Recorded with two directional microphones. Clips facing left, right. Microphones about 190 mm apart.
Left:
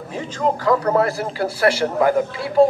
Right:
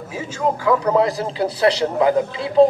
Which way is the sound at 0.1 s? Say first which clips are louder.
Left 1 dB; 10° right (ahead or behind).